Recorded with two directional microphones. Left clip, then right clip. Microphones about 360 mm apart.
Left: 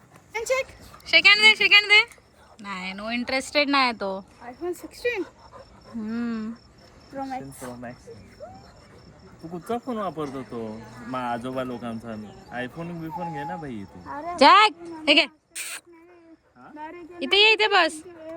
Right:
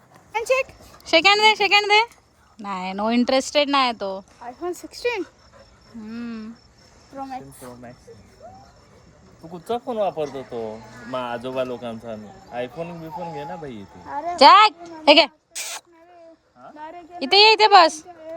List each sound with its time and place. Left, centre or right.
1.0 s speech: centre
4.4 s speech: centre
6.0 s wild animals: centre
9.4 s speech: centre
14.1 s a woman's voice: right
14.3 s wild animals: centre
14.8 s a sound: centre
17.2 s speech: centre